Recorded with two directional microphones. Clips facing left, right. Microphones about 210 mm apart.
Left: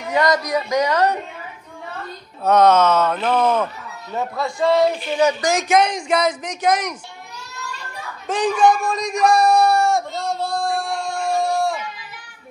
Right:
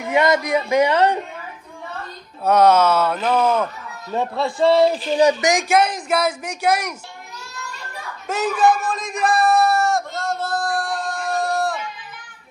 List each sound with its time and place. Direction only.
0.1 s a man's voice: 25° right (ahead or behind)
2.4 s speech: 10° right (ahead or behind)
4.2 s a man's voice: 30° right (ahead or behind)
5.5 s speech: 10° right (ahead or behind)
8.3 s speech: 5° right (ahead or behind)